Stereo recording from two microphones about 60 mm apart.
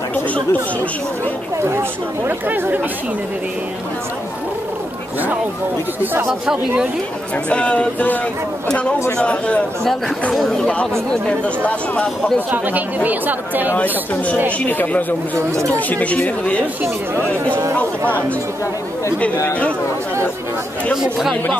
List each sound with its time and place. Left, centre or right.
0.1 s chatter: left
1.6 s speech: right
6.4 s speech: centre
7.4 s speech: centre
9.2 s speech: centre
10.3 s speech: centre
12.4 s speech: right
14.6 s speech: left
20.9 s speech: centre